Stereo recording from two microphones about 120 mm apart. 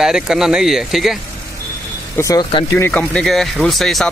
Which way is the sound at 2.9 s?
10° left (ahead or behind).